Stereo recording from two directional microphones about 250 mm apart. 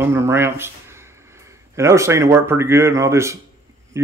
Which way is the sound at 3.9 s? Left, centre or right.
Centre.